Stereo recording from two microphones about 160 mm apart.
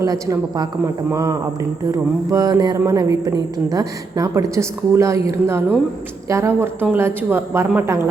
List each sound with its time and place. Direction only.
0.0 s a woman's voice: 20° right (ahead or behind)